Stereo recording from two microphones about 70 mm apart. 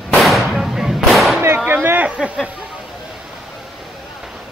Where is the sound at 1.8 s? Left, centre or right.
Right.